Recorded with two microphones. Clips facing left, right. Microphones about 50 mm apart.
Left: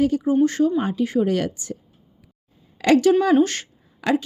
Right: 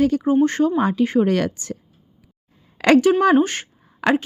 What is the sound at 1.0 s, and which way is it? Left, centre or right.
Speech, right.